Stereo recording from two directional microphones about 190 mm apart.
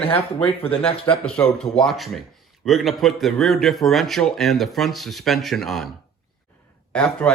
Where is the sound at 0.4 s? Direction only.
30° left (ahead or behind).